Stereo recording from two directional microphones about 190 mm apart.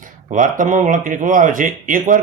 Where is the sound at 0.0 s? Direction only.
45° right (ahead or behind).